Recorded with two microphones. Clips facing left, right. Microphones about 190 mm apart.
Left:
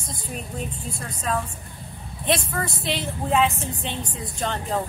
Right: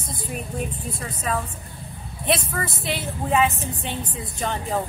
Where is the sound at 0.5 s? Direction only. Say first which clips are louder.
Right 2 dB; 5° right (ahead or behind).